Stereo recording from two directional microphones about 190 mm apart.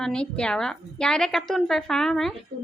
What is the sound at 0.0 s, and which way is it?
A woman's voice, 5° left (ahead or behind).